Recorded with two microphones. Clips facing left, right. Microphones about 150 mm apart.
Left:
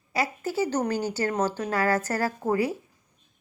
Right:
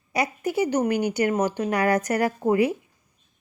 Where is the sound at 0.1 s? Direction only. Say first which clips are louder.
Right 3 dB; 20° right (ahead or behind).